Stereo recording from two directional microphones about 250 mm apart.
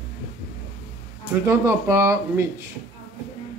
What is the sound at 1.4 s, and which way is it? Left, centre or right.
Speech, centre.